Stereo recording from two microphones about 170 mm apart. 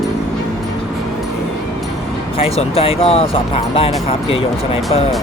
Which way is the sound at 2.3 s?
35° left (ahead or behind).